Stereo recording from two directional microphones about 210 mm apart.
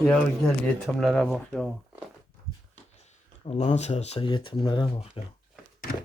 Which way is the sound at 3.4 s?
30° left (ahead or behind).